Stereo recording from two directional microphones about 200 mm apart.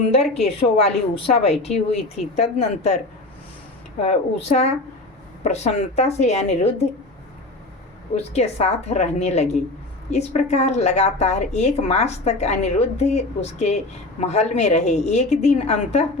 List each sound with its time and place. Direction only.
0.4 s a woman's voice: 30° left (ahead or behind)
4.0 s a woman's voice: 30° left (ahead or behind)
8.1 s a woman's voice: 30° left (ahead or behind)